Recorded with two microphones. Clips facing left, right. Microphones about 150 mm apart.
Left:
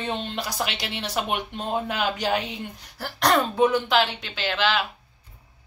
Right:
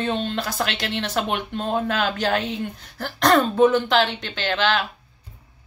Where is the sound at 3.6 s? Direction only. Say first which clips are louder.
Right 3 dB; 10° left (ahead or behind).